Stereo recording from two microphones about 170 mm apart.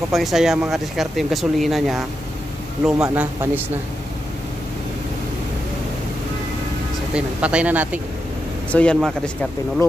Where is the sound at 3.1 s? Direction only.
10° right (ahead or behind).